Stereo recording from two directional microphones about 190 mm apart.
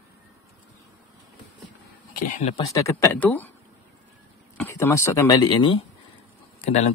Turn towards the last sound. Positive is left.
turn(degrees=35)  # may be behind; listen again after turning